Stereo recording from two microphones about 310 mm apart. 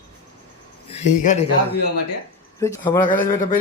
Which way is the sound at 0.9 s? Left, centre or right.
Left.